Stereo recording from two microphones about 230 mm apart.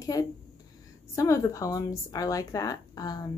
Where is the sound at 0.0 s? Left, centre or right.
Centre.